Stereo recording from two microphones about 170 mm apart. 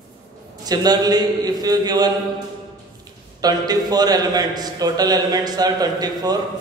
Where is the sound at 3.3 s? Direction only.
20° right (ahead or behind).